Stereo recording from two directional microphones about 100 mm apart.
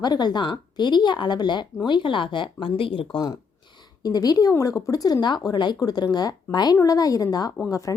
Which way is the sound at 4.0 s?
40° left (ahead or behind).